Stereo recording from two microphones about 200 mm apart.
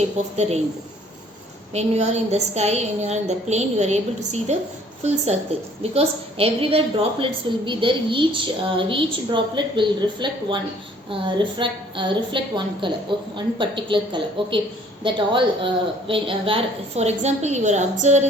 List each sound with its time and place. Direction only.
0.3 s a woman's voice: 35° right (ahead or behind)
1.7 s a woman's voice: 35° right (ahead or behind)